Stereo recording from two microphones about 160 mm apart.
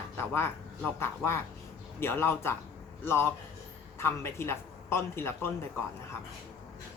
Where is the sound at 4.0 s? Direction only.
15° left (ahead or behind).